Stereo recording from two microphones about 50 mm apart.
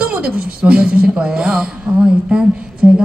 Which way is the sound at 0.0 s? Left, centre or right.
Right.